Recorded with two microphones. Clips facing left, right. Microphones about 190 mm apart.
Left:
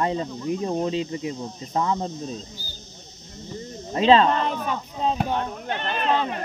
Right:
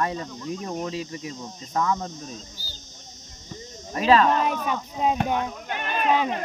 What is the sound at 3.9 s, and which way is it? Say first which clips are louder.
Speech: left 2 dB; 25° left (ahead or behind).